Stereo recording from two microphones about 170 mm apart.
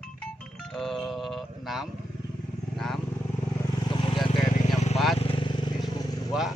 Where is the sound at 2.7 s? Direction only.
Centre (ahead or behind).